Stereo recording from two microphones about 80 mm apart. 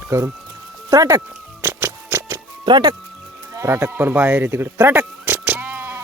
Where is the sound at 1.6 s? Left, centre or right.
Right.